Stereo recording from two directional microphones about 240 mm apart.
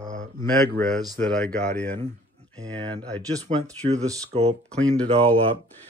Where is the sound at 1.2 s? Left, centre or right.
Centre.